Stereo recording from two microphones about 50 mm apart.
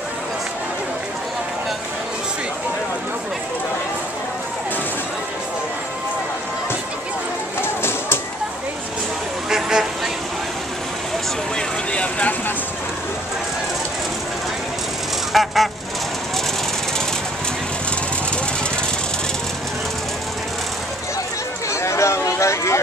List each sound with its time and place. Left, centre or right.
7.6 s music: left
9.5 s vehicle: centre
11.5 s vehicle: left
15.3 s goose: centre
21.6 s a sound: left